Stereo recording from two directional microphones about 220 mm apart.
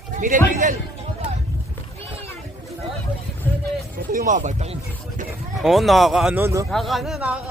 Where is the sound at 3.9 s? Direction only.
40° right (ahead or behind).